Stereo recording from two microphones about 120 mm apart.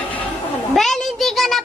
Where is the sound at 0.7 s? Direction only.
5° left (ahead or behind).